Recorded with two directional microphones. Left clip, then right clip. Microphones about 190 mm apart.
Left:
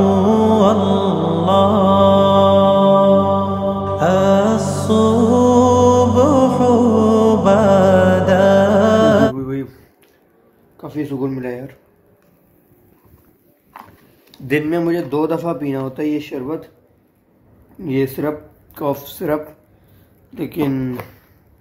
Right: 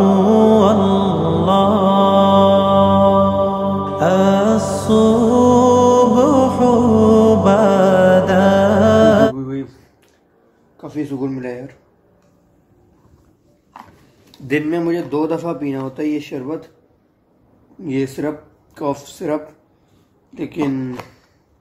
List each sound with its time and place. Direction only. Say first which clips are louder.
0.0 s music: right 2 dB; centre (ahead or behind)
10.8 s a sound: left 1 dB; 5° right (ahead or behind)
14.3 s speech: left 1 dB; centre (ahead or behind)
17.7 s speech: left 2 dB; 5° right (ahead or behind)